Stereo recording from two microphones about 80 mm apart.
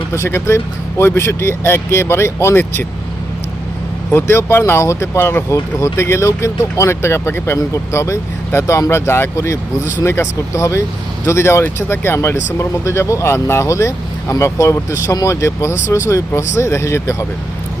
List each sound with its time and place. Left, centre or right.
0.1 s speech: left
4.1 s speech: left